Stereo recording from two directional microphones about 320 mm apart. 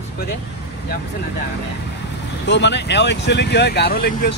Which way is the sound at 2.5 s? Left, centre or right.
Left.